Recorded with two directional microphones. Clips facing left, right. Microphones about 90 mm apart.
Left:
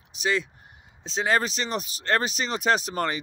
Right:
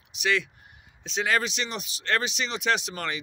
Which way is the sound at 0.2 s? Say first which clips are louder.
Even; 30° left (ahead or behind).